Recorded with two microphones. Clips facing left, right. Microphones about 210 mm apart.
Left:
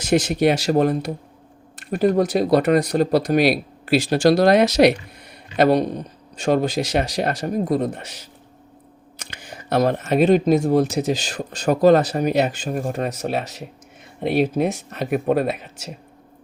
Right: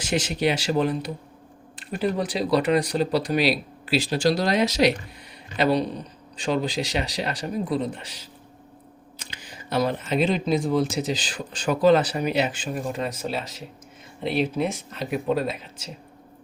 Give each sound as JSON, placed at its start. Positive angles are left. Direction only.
{"t": 0.0, "sound": "speech", "side_deg": 45}
{"t": 7.9, "sound": "speech", "side_deg": 60}
{"t": 9.4, "sound": "speech", "side_deg": 65}
{"t": 13.1, "sound": "speech", "side_deg": 65}
{"t": 14.2, "sound": "speech", "side_deg": 55}